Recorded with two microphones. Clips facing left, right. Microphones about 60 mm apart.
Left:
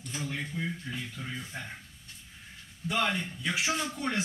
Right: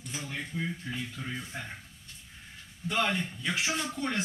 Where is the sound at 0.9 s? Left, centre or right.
Centre.